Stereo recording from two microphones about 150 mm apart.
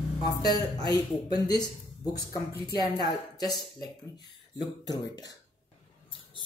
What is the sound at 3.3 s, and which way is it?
Speech, 25° left (ahead or behind).